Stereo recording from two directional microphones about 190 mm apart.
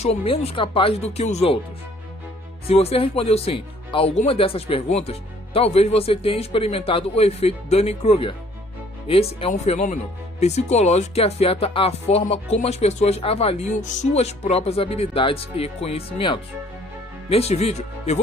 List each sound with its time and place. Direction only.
0.0 s speech: 30° left (ahead or behind)
2.7 s speech: 30° left (ahead or behind)